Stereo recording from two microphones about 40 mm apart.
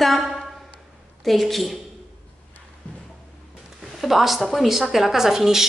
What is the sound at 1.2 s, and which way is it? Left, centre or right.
Speech, centre.